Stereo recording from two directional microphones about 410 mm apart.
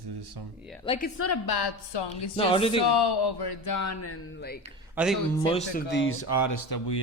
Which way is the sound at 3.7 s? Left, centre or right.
Left.